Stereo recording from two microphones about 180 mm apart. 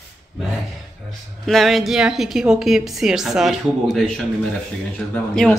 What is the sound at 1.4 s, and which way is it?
A woman's voice, centre (ahead or behind).